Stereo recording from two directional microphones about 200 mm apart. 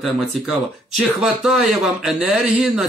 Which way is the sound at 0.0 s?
Centre (ahead or behind).